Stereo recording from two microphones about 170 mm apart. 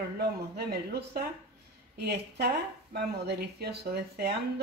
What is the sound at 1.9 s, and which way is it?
Speech, 70° right (ahead or behind).